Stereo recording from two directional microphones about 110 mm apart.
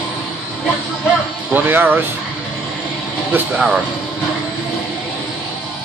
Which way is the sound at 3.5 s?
5° right (ahead or behind).